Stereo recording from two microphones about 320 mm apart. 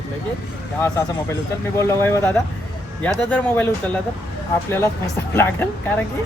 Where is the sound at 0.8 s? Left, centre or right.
Centre.